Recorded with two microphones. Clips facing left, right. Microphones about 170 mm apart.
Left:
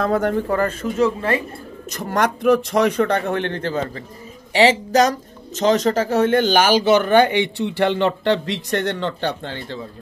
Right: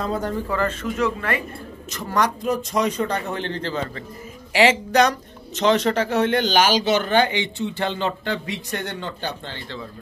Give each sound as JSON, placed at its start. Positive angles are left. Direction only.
{"t": 0.0, "sound": "speech", "side_deg": 65}
{"t": 0.5, "sound": "speech", "side_deg": 45}
{"t": 0.9, "sound": "speech", "side_deg": 30}
{"t": 1.9, "sound": "speech", "side_deg": 50}